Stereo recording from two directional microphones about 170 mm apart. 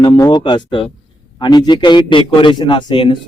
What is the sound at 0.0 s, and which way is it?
A man's voice, 25° left (ahead or behind).